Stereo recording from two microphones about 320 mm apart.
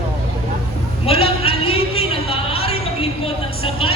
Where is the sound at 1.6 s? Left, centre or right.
Left.